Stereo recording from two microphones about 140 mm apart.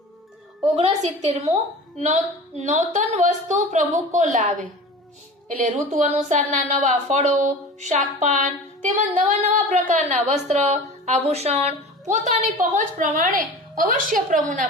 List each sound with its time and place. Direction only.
0.8 s a woman's voice: 45° right (ahead or behind)
2.6 s a woman's voice: 60° right (ahead or behind)
12.5 s a woman's voice: 75° right (ahead or behind)